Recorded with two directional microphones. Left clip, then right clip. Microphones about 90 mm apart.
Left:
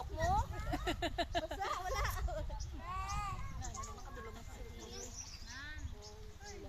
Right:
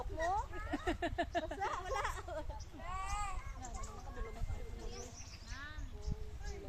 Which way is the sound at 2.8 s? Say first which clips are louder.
Even; 5° right (ahead or behind).